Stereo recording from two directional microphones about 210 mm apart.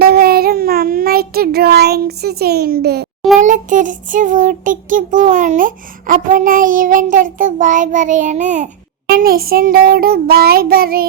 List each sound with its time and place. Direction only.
0.0 s child singing: 45° right (ahead or behind)
3.4 s child singing: 35° right (ahead or behind)